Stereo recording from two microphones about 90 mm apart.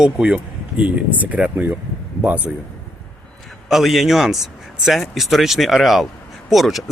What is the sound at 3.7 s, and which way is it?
Speech, centre (ahead or behind).